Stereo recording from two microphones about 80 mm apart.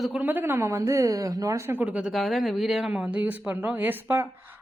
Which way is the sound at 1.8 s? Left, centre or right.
Centre.